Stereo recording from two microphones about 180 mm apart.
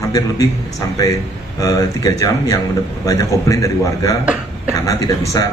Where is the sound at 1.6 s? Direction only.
20° left (ahead or behind).